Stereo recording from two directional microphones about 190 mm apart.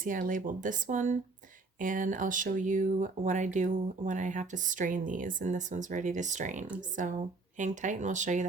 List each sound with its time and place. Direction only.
0.0 s speech: 45° right (ahead or behind)